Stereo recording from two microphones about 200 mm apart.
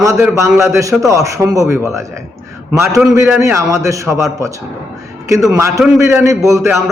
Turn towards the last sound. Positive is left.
turn(degrees=-15)  # may be behind; listen again after turning